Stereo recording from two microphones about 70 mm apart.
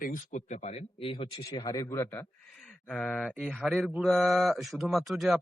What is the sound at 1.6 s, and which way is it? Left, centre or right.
Speech, left.